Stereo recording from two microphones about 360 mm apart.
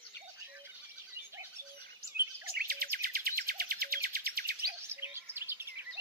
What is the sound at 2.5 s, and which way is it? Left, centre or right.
Music, right.